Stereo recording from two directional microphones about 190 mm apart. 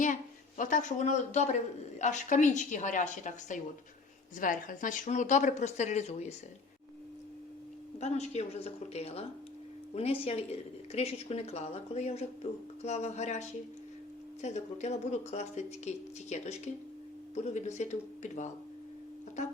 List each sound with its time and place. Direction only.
0.0 s a woman's voice: 40° left (ahead or behind)
7.9 s a woman's voice: 35° left (ahead or behind)
14.4 s a woman's voice: 35° left (ahead or behind)